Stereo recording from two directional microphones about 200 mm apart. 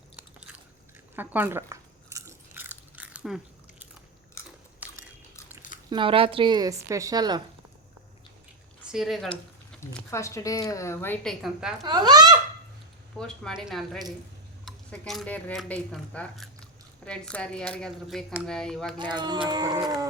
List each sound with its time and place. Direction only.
1.1 s biting: 10° right (ahead or behind)
4.4 s biting: 15° left (ahead or behind)
4.8 s biting: 5° right (ahead or behind)
5.9 s a woman's voice: 25° right (ahead or behind)
8.9 s speech: centre (ahead or behind)
9.9 s speech: 15° left (ahead or behind)
11.8 s a woman's voice: 20° right (ahead or behind)
13.1 s speech: 5° left (ahead or behind)
18.9 s a woman's voice: 20° right (ahead or behind)